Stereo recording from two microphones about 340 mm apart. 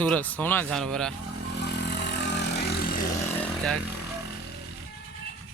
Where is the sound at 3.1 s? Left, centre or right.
Centre.